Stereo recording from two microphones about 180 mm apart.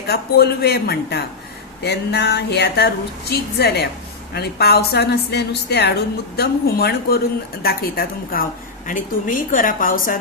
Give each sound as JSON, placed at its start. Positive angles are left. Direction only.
{"t": 0.1, "sound": "a woman's voice", "side_deg": 60}